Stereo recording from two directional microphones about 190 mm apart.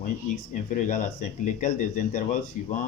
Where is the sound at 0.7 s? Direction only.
40° left (ahead or behind).